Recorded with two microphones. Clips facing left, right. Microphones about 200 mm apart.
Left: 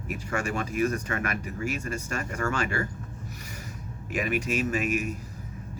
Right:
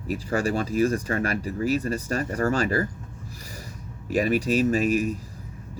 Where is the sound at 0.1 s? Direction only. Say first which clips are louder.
Right 6 dB; 35° right (ahead or behind).